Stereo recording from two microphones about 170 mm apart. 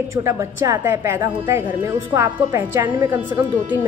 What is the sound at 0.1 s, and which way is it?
A woman's voice, 15° right (ahead or behind).